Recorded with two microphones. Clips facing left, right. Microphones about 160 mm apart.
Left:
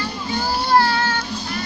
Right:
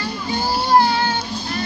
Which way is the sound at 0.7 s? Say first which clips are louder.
Right 2 dB; 15° right (ahead or behind).